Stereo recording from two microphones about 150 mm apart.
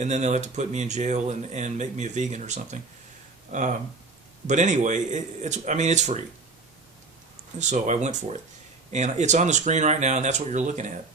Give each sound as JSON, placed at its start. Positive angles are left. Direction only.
{"t": 0.0, "sound": "speech", "side_deg": -50}
{"t": 7.7, "sound": "speech", "side_deg": -50}